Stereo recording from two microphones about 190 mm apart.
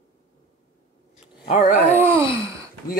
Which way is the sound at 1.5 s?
40° left (ahead or behind).